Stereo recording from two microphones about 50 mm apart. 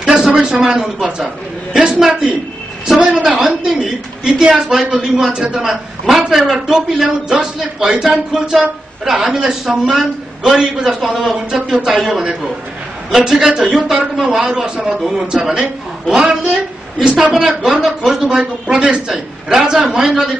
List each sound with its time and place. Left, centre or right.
0.0 s a man's voice: centre
17.0 s a woman's voice: centre